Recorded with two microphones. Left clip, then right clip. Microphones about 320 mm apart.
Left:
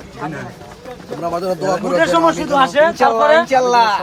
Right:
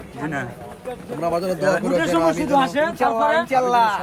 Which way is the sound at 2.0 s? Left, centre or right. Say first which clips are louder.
Left 6 dB; left.